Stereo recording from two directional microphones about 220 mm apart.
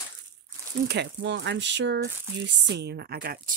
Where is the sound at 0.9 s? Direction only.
50° right (ahead or behind).